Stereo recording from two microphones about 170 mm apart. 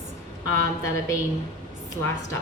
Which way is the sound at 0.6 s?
20° left (ahead or behind).